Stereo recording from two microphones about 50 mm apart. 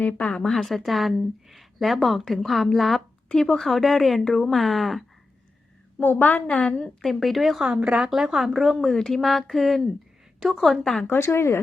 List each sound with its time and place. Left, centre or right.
0.0 s a woman's voice: left
0.3 s speech: centre
3.2 s speech: centre
6.0 s a woman's voice: left
6.7 s a woman's voice: centre
7.1 s speech: centre
11.2 s a woman's voice: left